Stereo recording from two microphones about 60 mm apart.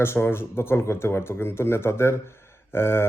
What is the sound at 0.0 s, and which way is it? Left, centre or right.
Speech, left.